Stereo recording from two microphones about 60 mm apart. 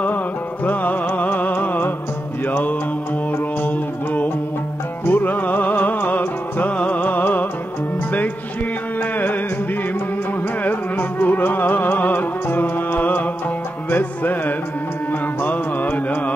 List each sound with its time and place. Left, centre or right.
0.7 s music: left
3.6 s music: left
10.6 s music: left